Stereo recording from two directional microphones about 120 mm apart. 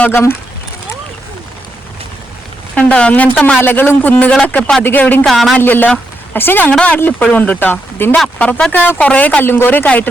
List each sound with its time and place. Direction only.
0.0 s speech: 20° left (ahead or behind)
2.7 s speech: 10° left (ahead or behind)
5.2 s speech: centre (ahead or behind)
5.5 s speech: 15° left (ahead or behind)